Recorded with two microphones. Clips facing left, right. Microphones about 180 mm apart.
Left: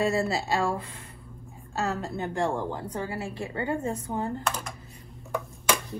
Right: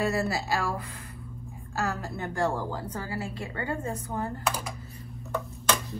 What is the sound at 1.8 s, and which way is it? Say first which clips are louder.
A woman's voice: left 2 dB; 20° left (ahead or behind).